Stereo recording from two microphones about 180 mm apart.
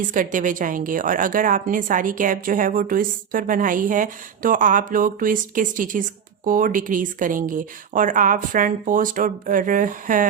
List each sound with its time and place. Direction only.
0.1 s a woman's voice: 45° right (ahead or behind)